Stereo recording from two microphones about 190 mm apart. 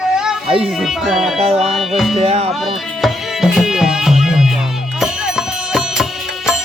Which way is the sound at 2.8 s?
Centre (ahead or behind).